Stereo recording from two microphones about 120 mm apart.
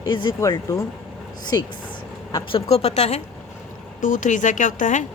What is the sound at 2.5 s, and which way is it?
Speech, 60° left (ahead or behind).